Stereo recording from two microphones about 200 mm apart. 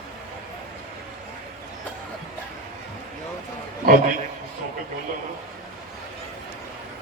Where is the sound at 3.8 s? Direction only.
45° right (ahead or behind).